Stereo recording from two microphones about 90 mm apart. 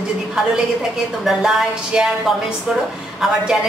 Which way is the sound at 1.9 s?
10° right (ahead or behind).